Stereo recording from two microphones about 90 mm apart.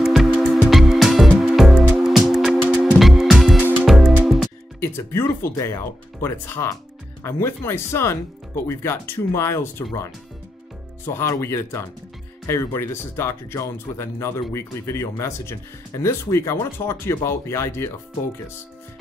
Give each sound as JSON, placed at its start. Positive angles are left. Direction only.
{"t": 0.0, "sound": "music", "side_deg": 0}
{"t": 4.7, "sound": "speech", "side_deg": 30}
{"t": 11.1, "sound": "speech", "side_deg": 30}